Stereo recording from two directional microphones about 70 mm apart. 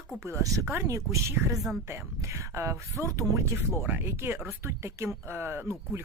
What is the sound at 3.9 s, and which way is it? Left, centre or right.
Speech, right.